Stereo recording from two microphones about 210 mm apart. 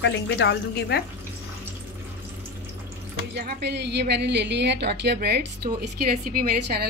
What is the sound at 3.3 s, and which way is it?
A woman's voice, 50° right (ahead or behind).